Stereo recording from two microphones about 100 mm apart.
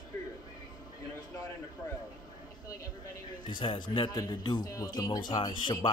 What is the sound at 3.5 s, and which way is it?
Speech, 50° left (ahead or behind).